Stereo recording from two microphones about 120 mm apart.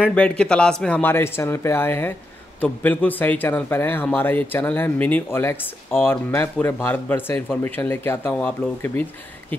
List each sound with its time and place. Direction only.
0.0 s a man's voice: 10° left (ahead or behind)